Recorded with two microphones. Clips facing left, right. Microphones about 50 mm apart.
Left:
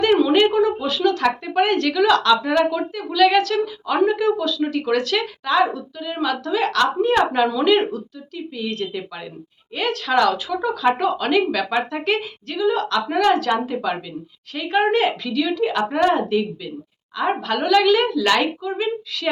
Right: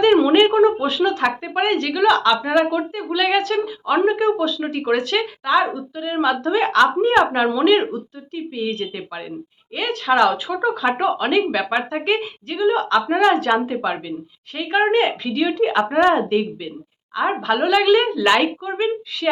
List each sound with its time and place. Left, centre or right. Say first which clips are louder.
0.0 s speech: right 2 dB; right